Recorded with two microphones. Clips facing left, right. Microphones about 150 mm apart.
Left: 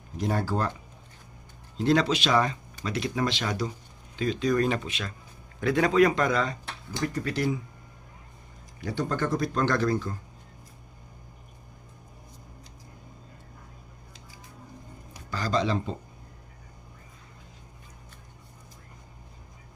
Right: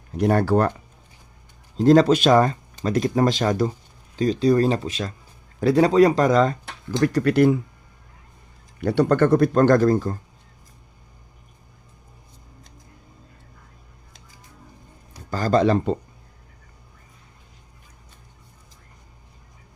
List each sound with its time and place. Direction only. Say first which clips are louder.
0.1 s speech: right 10 dB; 65° right (ahead or behind)
1.7 s speech: right 9 dB; 40° right (ahead or behind)
7.0 s speech: right 11 dB; 75° right (ahead or behind)
8.8 s speech: right 11 dB; 65° right (ahead or behind); by 10.2 s 45° right (ahead or behind)
15.3 s speech: right 8 dB; 50° right (ahead or behind)